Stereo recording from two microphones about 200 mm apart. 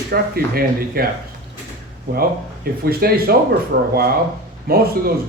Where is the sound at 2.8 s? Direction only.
50° right (ahead or behind).